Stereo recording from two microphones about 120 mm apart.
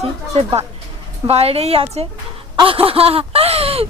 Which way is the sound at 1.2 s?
55° right (ahead or behind).